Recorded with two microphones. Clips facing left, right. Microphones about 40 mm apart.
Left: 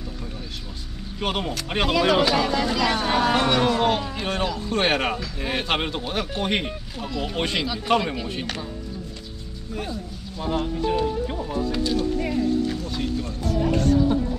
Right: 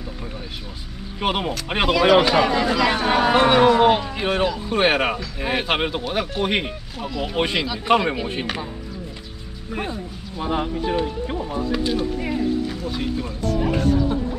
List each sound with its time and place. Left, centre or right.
1.2 s speech: centre
7.9 s speech: centre
9.7 s speech: right
10.4 s speech: right